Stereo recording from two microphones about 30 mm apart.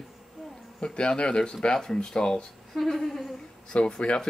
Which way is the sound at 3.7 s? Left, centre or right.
Left.